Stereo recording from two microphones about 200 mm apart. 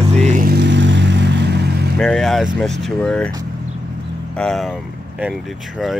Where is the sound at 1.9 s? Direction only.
5° left (ahead or behind).